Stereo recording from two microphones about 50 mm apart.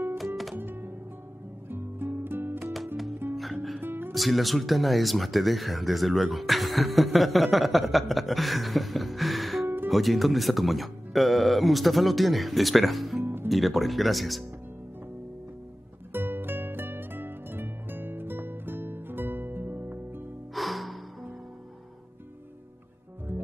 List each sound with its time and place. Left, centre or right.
0.6 s music: right
4.1 s speech: centre
13.2 s music: right
13.5 s speech: centre
16.1 s music: right
20.5 s music: centre
23.3 s music: right